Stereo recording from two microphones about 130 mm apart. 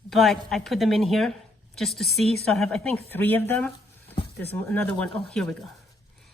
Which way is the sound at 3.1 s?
15° left (ahead or behind).